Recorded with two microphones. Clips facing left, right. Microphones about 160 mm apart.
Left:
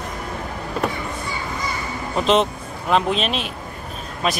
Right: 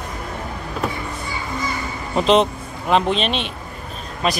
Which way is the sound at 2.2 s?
Centre (ahead or behind).